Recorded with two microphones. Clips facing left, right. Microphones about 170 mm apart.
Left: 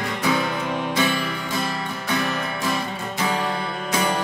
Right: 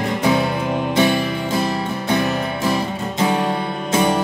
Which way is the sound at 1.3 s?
25° right (ahead or behind).